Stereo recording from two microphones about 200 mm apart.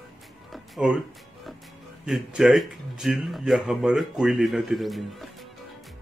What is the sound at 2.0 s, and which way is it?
Speech, centre (ahead or behind).